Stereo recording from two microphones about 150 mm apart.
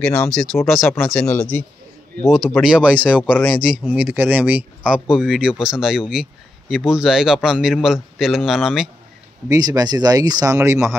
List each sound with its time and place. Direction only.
0.3 s a man's voice: 5° left (ahead or behind)
3.3 s speech: 10° left (ahead or behind)
3.6 s a man's voice: 5° right (ahead or behind)
9.5 s speech: 25° right (ahead or behind)